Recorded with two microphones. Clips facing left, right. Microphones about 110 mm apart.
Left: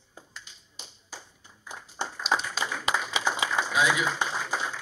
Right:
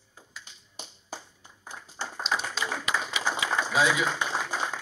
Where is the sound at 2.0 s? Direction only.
20° left (ahead or behind).